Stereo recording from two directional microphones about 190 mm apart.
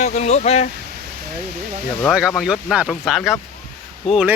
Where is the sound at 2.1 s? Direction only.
5° right (ahead or behind).